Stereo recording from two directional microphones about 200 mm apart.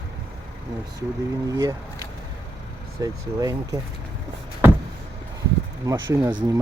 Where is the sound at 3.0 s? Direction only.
15° right (ahead or behind).